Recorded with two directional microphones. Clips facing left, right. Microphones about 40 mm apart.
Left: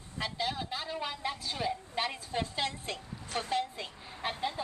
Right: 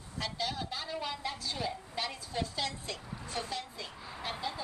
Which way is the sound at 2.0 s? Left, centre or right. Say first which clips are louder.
Left 1 dB; left.